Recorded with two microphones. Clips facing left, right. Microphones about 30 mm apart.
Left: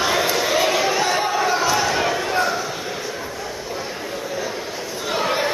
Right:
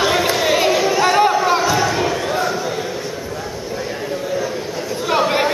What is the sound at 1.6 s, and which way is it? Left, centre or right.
Crowd, centre.